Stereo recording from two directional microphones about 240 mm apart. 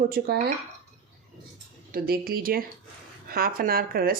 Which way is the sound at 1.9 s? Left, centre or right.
Right.